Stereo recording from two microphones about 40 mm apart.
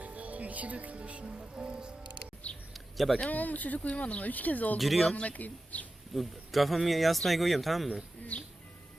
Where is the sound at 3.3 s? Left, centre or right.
Left.